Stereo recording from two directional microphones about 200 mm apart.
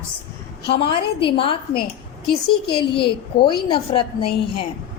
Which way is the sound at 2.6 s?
25° left (ahead or behind).